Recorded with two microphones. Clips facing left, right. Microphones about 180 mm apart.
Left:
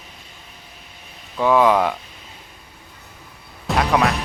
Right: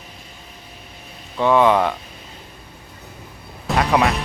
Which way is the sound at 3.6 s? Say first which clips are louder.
Right 1 dB; centre (ahead or behind).